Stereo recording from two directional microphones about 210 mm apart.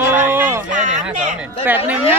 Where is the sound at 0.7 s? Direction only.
35° right (ahead or behind).